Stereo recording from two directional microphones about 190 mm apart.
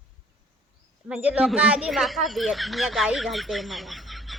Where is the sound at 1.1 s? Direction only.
5° right (ahead or behind).